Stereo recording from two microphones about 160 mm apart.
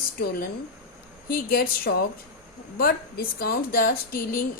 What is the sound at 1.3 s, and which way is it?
Speech, 70° left (ahead or behind).